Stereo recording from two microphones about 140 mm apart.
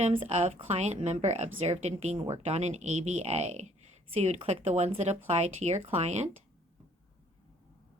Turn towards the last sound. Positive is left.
turn(degrees=-55)  # may be behind; listen again after turning